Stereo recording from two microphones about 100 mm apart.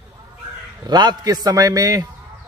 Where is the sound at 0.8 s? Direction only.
45° right (ahead or behind).